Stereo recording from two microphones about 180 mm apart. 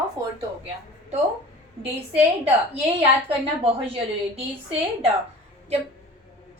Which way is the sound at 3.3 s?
30° right (ahead or behind).